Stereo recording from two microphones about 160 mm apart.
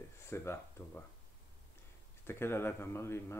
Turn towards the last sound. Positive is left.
turn(degrees=15)  # may be behind; listen again after turning